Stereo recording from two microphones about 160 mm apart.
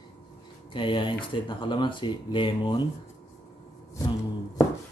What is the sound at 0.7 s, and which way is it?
Speech, 30° left (ahead or behind).